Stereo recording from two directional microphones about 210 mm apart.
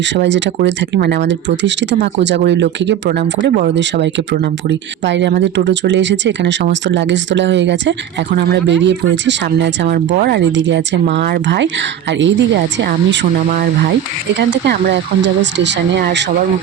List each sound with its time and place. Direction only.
0.1 s speech: 60° right (ahead or behind)